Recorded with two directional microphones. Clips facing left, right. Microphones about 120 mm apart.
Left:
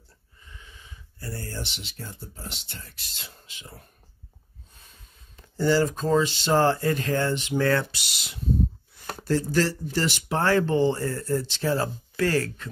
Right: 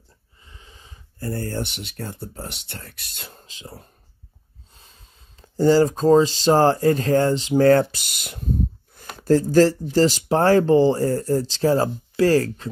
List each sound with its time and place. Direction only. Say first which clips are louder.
0.5 s snort: right 1 dB; 30° right (ahead or behind)
1.2 s speech: right 8 dB; 50° right (ahead or behind)
3.4 s speech: right 6 dB; 35° right (ahead or behind)
5.3 s speech: right 6 dB; 40° right (ahead or behind)